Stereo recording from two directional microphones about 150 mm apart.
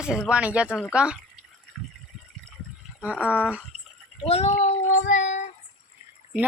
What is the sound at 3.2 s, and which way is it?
Speech, 10° left (ahead or behind).